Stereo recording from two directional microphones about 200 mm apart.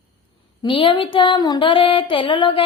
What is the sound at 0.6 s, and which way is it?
Music, 25° left (ahead or behind).